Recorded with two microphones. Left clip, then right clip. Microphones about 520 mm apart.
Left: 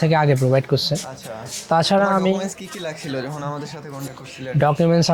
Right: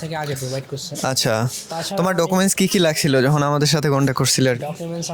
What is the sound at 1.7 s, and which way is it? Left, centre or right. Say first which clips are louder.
Speech: left 9 dB; left.